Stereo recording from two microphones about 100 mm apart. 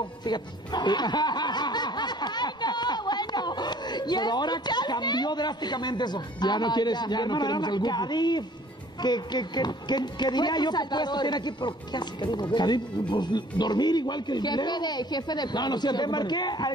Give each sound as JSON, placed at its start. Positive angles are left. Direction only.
{"t": 0.0, "sound": "a woman's voice", "side_deg": 45}